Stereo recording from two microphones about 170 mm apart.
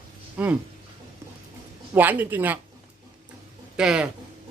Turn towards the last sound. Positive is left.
turn(degrees=-5)  # may be behind; listen again after turning